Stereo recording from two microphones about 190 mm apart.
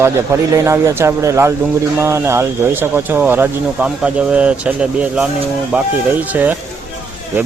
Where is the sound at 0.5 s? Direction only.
15° right (ahead or behind).